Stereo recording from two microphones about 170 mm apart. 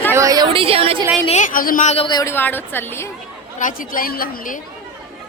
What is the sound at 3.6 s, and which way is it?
A woman's voice, 50° left (ahead or behind).